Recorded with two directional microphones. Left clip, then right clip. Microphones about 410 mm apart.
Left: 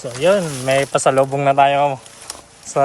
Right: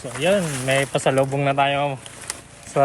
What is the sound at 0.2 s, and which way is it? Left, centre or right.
Speech, left.